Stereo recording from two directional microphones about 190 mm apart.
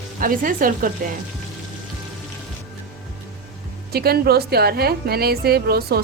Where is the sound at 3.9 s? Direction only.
55° right (ahead or behind).